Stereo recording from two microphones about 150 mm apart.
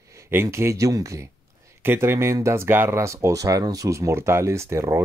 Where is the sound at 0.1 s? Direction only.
15° right (ahead or behind).